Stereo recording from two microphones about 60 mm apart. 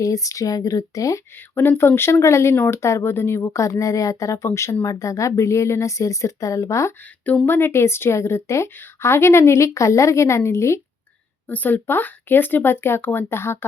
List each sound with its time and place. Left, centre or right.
0.0 s speech: left
1.4 s speech: left
2.1 s a woman's voice: left
4.4 s speech: left
7.4 s a woman's voice: left
8.7 s a woman's voice: left
11.4 s speech: left